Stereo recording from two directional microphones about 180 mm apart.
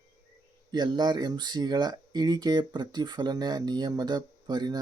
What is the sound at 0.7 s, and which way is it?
Speech, 25° right (ahead or behind).